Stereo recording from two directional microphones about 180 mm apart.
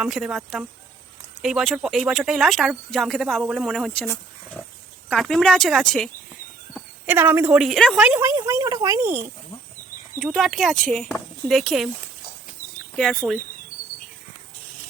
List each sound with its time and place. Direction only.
0.0 s speech: centre (ahead or behind)
6.7 s speech: 10° right (ahead or behind)
8.0 s speech: 10° right (ahead or behind)
10.3 s speech: centre (ahead or behind)
13.1 s speech: 5° right (ahead or behind)